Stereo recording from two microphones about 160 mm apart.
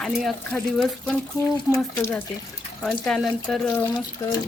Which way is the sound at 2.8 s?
Centre (ahead or behind).